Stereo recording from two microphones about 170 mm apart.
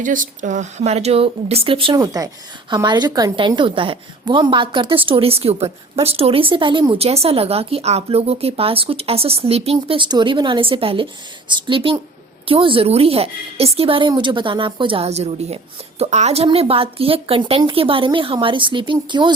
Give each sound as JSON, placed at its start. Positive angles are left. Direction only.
{"t": 0.0, "sound": "a woman's voice", "side_deg": -50}